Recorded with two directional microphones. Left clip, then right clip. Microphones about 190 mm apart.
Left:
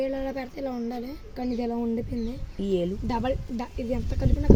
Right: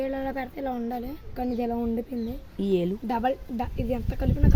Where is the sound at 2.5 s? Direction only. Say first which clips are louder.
Right 1 dB; 45° right (ahead or behind).